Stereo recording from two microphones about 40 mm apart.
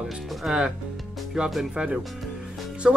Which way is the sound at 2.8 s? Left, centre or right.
Centre.